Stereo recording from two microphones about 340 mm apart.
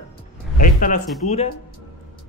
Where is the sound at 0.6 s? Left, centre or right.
Left.